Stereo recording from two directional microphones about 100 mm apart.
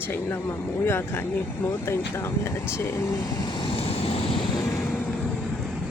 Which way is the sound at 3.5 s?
60° left (ahead or behind).